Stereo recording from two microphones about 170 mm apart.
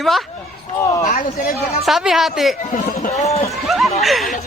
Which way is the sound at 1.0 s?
50° left (ahead or behind).